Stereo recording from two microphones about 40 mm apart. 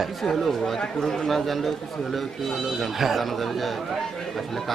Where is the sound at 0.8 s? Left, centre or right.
Centre.